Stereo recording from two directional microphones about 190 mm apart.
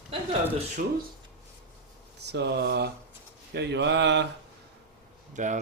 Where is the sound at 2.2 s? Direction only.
60° right (ahead or behind).